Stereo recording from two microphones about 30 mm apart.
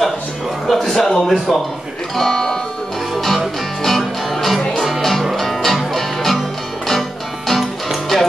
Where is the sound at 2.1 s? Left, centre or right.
Centre.